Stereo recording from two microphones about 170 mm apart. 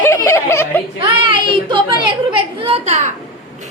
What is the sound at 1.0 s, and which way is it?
A child's voice, 30° right (ahead or behind).